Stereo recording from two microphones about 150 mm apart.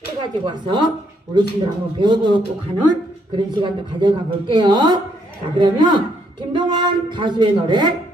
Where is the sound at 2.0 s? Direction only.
30° right (ahead or behind).